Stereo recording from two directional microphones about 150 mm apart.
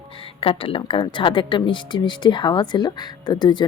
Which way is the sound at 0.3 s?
35° left (ahead or behind).